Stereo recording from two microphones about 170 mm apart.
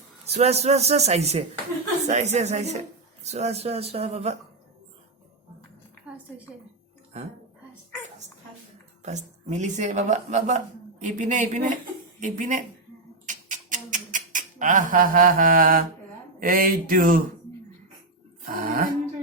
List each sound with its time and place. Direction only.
0.3 s a man's voice: 40° right (ahead or behind)
9.0 s a woman's voice: 45° right (ahead or behind)
13.2 s a sound: 50° right (ahead or behind)
18.4 s music: 55° right (ahead or behind)